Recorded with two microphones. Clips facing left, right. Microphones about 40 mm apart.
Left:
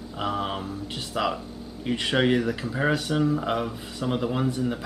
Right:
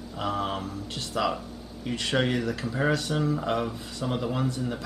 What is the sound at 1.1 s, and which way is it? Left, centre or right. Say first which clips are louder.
Speech: left 1 dB; centre.